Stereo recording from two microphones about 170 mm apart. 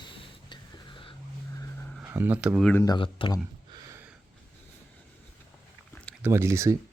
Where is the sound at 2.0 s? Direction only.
10° right (ahead or behind).